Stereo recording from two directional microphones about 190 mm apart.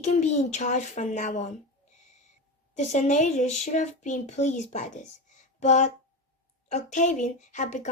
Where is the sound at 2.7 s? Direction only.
40° left (ahead or behind).